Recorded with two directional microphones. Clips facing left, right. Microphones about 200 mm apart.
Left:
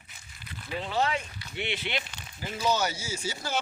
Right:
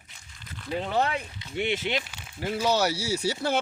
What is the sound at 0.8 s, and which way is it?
Speech, 55° right (ahead or behind).